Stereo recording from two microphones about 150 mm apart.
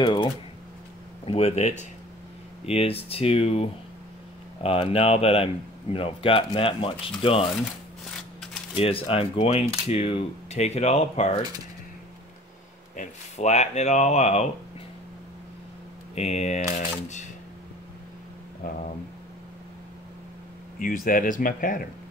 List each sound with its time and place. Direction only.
0.0 s typing: 35° left (ahead or behind)
1.2 s speech: 40° left (ahead or behind)
4.6 s speech: 40° left (ahead or behind)
8.7 s speech: 40° left (ahead or behind)
12.9 s speech: 50° left (ahead or behind)
16.2 s speech: 45° left (ahead or behind)
20.8 s speech: 65° left (ahead or behind)